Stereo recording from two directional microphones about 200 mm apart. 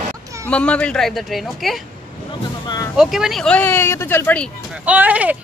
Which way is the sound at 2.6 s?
15° left (ahead or behind).